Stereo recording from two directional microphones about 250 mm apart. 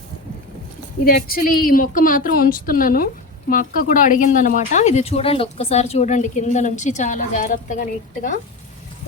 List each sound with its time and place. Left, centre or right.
1.0 s a woman's voice: left